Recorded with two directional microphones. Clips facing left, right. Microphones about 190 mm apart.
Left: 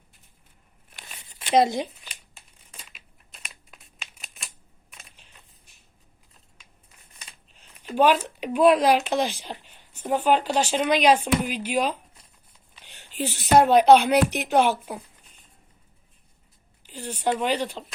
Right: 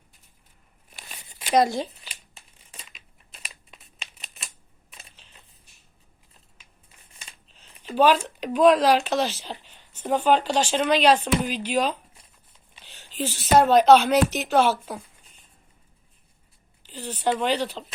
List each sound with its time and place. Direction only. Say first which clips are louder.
1.3 s a sound: even; centre (ahead or behind)
1.5 s speech: left 1 dB; 20° left (ahead or behind)
2.7 s crumpling: right 1 dB; 5° left (ahead or behind)
7.6 s a sound: right 1 dB; 5° left (ahead or behind)
8.4 s speech: even; 10° left (ahead or behind)
16.8 s speech: right 1 dB; 10° left (ahead or behind)